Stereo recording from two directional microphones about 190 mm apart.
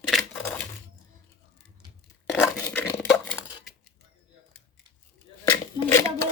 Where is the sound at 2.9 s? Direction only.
Centre (ahead or behind).